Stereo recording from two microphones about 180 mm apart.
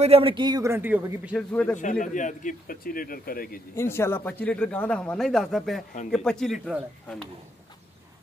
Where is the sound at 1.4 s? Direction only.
5° left (ahead or behind).